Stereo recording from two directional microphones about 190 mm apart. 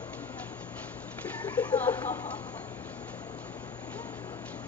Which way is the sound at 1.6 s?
10° left (ahead or behind).